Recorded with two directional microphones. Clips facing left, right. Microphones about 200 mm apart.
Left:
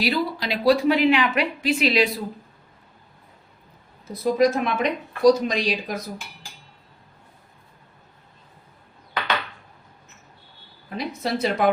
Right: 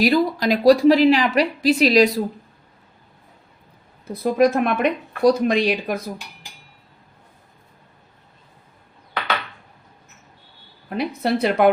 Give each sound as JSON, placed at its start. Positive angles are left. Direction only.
{"t": 0.0, "sound": "a woman's voice", "side_deg": -45}
{"t": 4.0, "sound": "speech", "side_deg": -60}
{"t": 10.8, "sound": "speech", "side_deg": -60}